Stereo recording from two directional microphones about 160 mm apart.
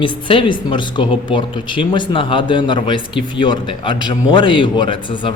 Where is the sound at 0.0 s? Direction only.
30° left (ahead or behind).